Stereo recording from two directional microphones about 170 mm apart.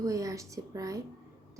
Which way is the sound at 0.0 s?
20° right (ahead or behind).